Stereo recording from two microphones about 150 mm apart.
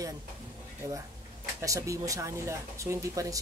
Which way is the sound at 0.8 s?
20° right (ahead or behind).